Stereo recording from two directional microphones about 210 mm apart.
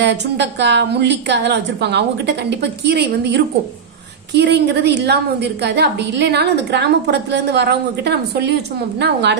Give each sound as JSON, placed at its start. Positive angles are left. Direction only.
{"t": 0.0, "sound": "a woman's voice", "side_deg": -55}